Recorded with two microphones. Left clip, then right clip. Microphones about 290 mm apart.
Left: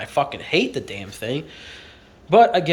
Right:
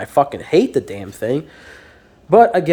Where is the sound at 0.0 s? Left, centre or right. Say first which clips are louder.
Right 6 dB; right.